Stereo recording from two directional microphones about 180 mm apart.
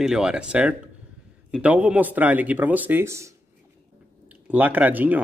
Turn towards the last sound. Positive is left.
turn(degrees=-10)  # may be behind; listen again after turning